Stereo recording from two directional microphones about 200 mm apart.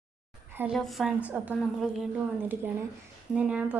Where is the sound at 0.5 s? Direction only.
10° right (ahead or behind).